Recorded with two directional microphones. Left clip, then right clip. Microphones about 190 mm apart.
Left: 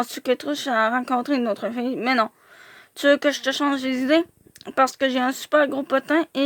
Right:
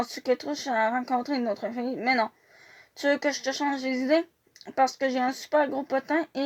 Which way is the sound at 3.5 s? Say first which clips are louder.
Left 5 dB; 55° left (ahead or behind).